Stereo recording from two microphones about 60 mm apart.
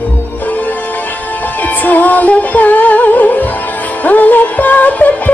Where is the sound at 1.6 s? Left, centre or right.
Left.